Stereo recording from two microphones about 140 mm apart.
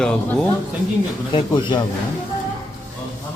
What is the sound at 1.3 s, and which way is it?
Speech, 35° left (ahead or behind).